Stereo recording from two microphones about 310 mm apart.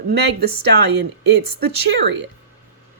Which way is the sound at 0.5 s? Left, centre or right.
Right.